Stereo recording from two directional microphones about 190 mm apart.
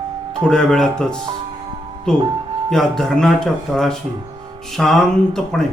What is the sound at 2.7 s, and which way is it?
Speech, centre (ahead or behind).